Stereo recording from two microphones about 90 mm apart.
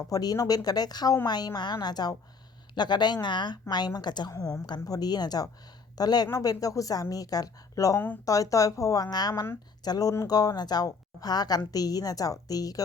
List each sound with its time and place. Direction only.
0.1 s a woman's voice: 45° left (ahead or behind)
4.3 s a woman's voice: 40° left (ahead or behind)